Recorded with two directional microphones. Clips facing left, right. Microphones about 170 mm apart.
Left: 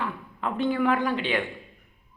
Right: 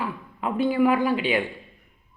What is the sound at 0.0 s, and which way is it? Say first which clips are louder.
Speech: right 2 dB; 10° right (ahead or behind).